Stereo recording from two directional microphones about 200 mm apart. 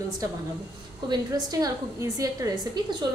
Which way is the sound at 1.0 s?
20° right (ahead or behind).